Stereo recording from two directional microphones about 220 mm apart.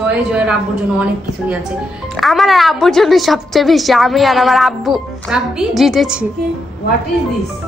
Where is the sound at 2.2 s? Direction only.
Centre (ahead or behind).